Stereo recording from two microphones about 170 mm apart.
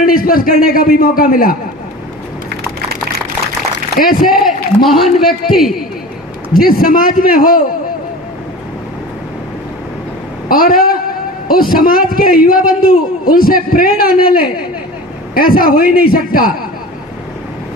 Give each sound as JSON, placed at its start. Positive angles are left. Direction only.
{"t": 0.0, "sound": "a sound", "side_deg": 55}
{"t": 0.7, "sound": "a man's voice", "side_deg": 60}
{"t": 3.9, "sound": "a man's voice", "side_deg": 55}
{"t": 4.3, "sound": "a man's voice", "side_deg": 0}
{"t": 6.5, "sound": "a man's voice", "side_deg": 60}
{"t": 10.5, "sound": "a man's voice", "side_deg": 55}